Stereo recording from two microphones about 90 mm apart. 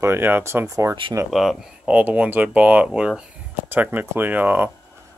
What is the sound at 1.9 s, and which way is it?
Speech, 15° right (ahead or behind).